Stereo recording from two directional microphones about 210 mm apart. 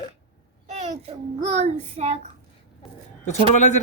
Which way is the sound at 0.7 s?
35° right (ahead or behind).